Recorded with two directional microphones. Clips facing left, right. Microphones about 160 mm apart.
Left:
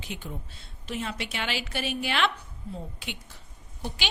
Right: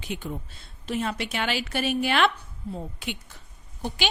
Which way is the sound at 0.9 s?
45° right (ahead or behind).